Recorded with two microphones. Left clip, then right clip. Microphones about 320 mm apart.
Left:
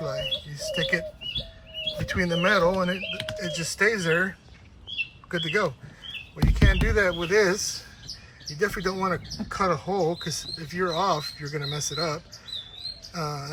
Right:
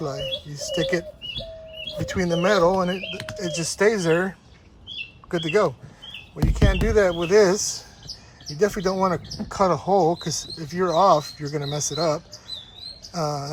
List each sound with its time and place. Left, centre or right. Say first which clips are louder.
0.0 s speech: right 1 dB; centre
2.1 s speech: right 3 dB; centre